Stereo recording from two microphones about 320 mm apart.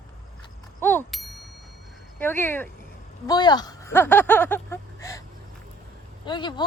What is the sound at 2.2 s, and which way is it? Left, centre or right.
Speech, centre.